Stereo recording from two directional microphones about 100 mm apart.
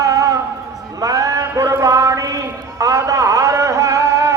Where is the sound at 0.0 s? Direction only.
35° right (ahead or behind).